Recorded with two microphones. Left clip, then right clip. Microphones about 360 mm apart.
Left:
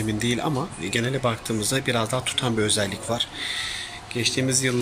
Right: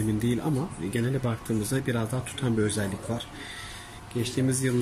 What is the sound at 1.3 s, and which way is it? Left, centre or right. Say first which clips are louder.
Speech: left 5 dB; centre.